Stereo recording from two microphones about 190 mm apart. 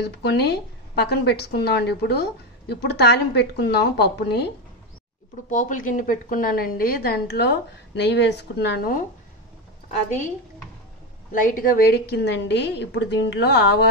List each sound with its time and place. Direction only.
0.0 s a woman's voice: 65° left (ahead or behind)
5.5 s a woman's voice: 45° left (ahead or behind)
11.4 s a woman's voice: 50° left (ahead or behind)